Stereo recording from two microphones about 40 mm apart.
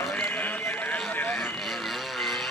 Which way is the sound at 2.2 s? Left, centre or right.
Centre.